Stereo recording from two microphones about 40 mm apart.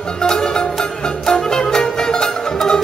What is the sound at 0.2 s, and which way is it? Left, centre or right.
Music, centre.